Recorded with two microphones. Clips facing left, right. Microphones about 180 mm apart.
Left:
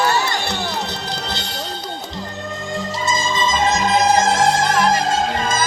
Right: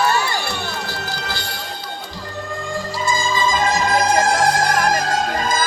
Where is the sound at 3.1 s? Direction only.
20° left (ahead or behind).